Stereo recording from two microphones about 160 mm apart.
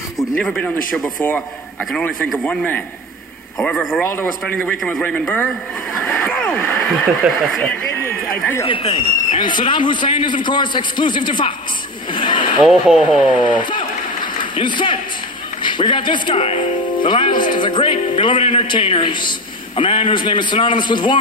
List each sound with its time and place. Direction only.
0.4 s a man's voice: 5° left (ahead or behind)
1.9 s a man's voice: 5° left (ahead or behind)
4.0 s a man's voice: 15° left (ahead or behind)
6.0 s a sound: 5° left (ahead or behind)
8.6 s a man's voice: 30° left (ahead or behind)
12.6 s a man's voice: centre (ahead or behind)
13.7 s applause: 30° left (ahead or behind)
15.6 s a man's voice: 30° left (ahead or behind)